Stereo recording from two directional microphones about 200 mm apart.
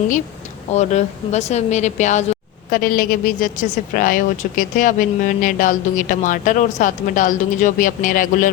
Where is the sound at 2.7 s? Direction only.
45° left (ahead or behind).